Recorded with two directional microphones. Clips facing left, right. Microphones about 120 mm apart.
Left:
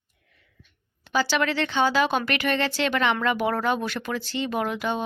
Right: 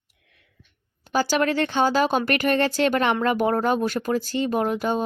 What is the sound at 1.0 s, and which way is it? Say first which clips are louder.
Speech: right 2 dB; 45° right (ahead or behind).